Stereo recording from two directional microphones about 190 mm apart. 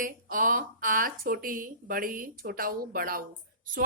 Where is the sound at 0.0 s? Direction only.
45° right (ahead or behind).